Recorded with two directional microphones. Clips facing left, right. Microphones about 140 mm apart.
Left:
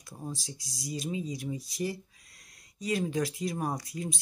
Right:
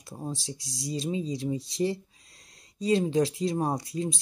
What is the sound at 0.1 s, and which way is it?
Speech, 30° right (ahead or behind).